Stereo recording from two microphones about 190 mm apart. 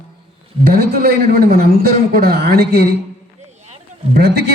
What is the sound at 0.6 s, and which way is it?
A man's voice, 55° right (ahead or behind).